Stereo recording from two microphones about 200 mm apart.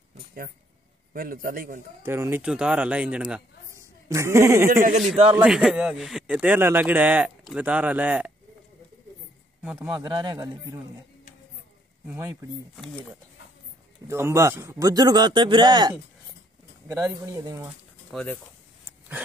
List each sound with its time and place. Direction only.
1.1 s a man's voice: 45° right (ahead or behind)
2.0 s a man's voice: 15° right (ahead or behind)
5.1 s a man's voice: 30° right (ahead or behind)
5.4 s speech: 5° right (ahead or behind)
9.6 s speech: 5° right (ahead or behind)
9.9 s a man's voice: 20° right (ahead or behind)
12.1 s speech: 15° right (ahead or behind)
14.0 s a man's voice: 15° right (ahead or behind)
18.1 s speech: 5° left (ahead or behind)